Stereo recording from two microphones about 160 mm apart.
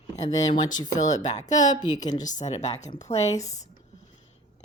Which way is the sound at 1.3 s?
50° left (ahead or behind).